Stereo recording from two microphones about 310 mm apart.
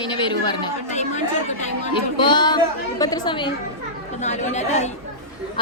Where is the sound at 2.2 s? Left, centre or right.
Centre.